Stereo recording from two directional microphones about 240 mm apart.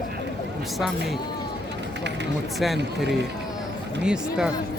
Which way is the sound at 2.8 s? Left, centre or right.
Right.